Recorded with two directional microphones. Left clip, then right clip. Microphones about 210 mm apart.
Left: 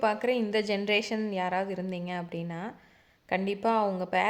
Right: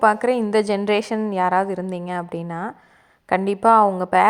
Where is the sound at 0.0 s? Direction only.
25° right (ahead or behind).